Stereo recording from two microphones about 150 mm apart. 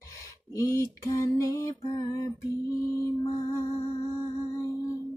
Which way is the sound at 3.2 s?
25° left (ahead or behind).